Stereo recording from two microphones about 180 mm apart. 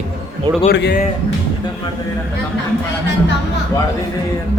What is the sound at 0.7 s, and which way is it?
Speech, 70° left (ahead or behind).